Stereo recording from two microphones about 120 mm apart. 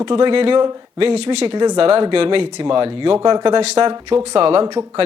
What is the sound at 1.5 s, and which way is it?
Speech, 35° right (ahead or behind).